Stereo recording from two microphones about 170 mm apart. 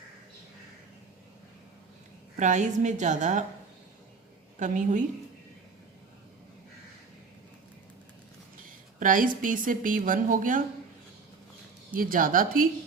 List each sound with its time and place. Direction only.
2.3 s a woman's voice: 45° right (ahead or behind)
4.6 s a woman's voice: 45° right (ahead or behind)
9.0 s a woman's voice: 50° right (ahead or behind)
11.9 s a woman's voice: 55° right (ahead or behind)